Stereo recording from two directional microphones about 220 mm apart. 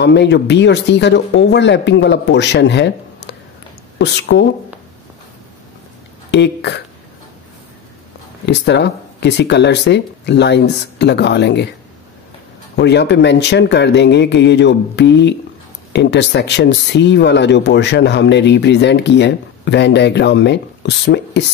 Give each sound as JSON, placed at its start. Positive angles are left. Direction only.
{"t": 0.0, "sound": "speech", "side_deg": 50}
{"t": 6.3, "sound": "speech", "side_deg": 50}
{"t": 8.5, "sound": "speech", "side_deg": 50}
{"t": 12.7, "sound": "speech", "side_deg": 50}